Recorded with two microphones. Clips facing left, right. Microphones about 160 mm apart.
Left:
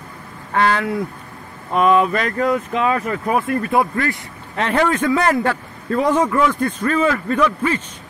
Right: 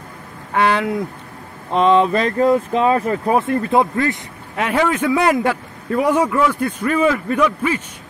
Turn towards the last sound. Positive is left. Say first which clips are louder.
# even
turn(degrees=-10)  # may be behind; listen again after turning